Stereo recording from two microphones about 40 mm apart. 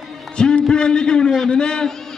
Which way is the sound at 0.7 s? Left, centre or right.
Centre.